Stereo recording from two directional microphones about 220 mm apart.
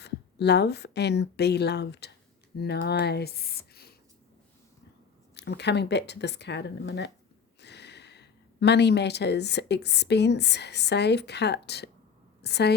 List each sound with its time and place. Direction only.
0.0 s a woman's voice: 50° left (ahead or behind)
5.3 s a woman's voice: 50° left (ahead or behind)